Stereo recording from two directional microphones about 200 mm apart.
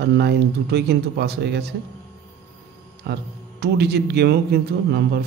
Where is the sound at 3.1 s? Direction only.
55° right (ahead or behind).